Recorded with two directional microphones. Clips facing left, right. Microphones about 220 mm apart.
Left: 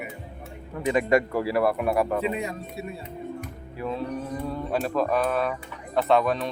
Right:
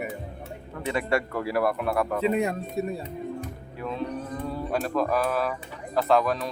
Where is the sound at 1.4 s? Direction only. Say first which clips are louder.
Left 2 dB; centre (ahead or behind).